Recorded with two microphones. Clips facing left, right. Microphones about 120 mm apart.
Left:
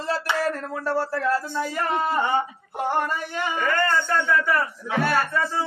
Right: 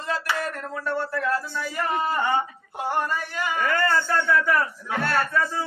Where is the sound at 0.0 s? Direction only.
30° left (ahead or behind).